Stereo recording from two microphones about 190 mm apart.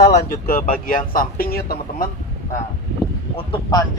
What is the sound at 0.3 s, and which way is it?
Speech, 50° left (ahead or behind).